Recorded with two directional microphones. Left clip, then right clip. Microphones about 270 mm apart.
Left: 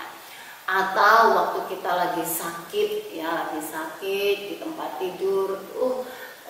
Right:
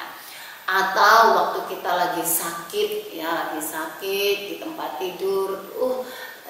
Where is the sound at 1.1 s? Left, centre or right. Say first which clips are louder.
Right 2 dB; centre.